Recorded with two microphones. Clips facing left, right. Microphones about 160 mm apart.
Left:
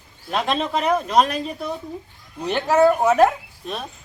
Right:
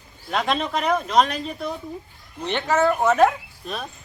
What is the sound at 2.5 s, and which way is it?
Speech, 5° left (ahead or behind).